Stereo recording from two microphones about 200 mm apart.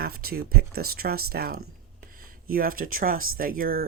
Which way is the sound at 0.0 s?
50° right (ahead or behind).